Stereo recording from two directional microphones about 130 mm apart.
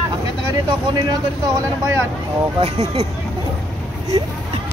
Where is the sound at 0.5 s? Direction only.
30° right (ahead or behind).